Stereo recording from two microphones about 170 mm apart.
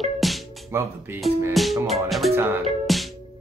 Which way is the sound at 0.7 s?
15° right (ahead or behind).